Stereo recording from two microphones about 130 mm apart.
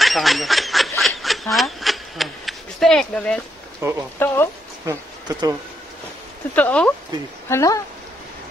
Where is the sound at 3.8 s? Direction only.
20° right (ahead or behind).